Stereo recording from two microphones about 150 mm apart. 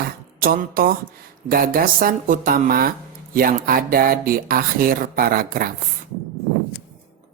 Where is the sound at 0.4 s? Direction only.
70° right (ahead or behind).